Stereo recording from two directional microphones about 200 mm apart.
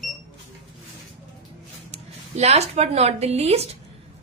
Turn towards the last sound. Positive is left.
turn(degrees=-30)  # may be behind; listen again after turning